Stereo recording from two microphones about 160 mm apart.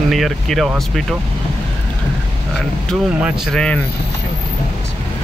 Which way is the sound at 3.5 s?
5° left (ahead or behind).